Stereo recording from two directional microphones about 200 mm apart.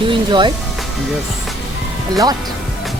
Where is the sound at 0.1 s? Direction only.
25° right (ahead or behind).